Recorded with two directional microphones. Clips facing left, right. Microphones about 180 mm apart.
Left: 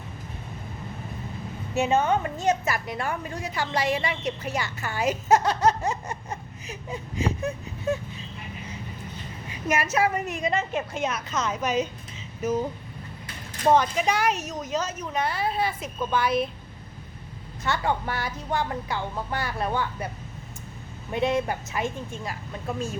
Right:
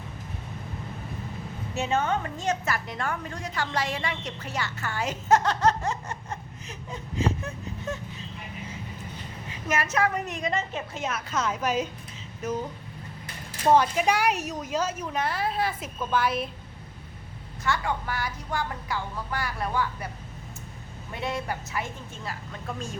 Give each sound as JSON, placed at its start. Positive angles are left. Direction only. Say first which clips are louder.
{"t": 1.7, "sound": "a woman's voice", "louder": "left 4 dB", "side_deg": 15}
{"t": 9.6, "sound": "a woman's voice", "louder": "left 2 dB", "side_deg": 10}
{"t": 13.7, "sound": "a woman's voice", "louder": "right 1 dB", "side_deg": -5}
{"t": 17.6, "sound": "speech", "louder": "left 2 dB", "side_deg": 25}
{"t": 21.1, "sound": "speech", "louder": "left 7 dB", "side_deg": 20}